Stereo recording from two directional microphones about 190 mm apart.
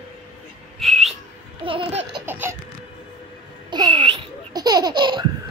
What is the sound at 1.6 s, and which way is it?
Laughter, 30° right (ahead or behind).